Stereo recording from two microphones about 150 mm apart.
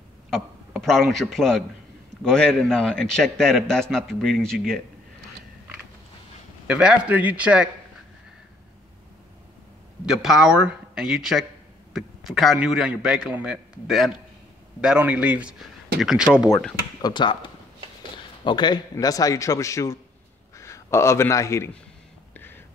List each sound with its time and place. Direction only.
0.3 s a man's voice: centre (ahead or behind)
6.7 s a man's voice: 5° right (ahead or behind)
10.0 s a man's voice: 5° right (ahead or behind)
17.0 s a man's voice: 30° left (ahead or behind)
22.3 s a sound: 15° left (ahead or behind)